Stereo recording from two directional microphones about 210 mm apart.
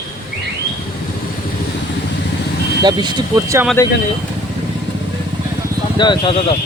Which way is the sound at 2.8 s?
20° right (ahead or behind).